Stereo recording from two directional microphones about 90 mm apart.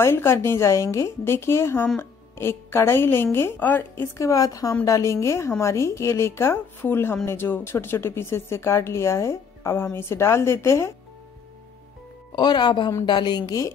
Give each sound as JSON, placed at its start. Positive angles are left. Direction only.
{"t": 0.0, "sound": "a woman's voice", "side_deg": 25}
{"t": 12.4, "sound": "a woman's voice", "side_deg": 55}